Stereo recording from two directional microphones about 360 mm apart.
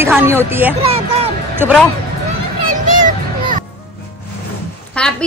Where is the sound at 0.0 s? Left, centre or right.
Centre.